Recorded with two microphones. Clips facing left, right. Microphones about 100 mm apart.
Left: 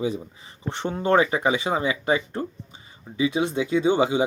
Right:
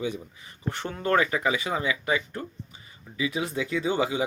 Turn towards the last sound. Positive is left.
turn(degrees=25)  # may be behind; listen again after turning